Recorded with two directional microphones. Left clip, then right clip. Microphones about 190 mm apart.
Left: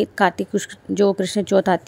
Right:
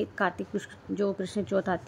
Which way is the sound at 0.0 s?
30° left (ahead or behind).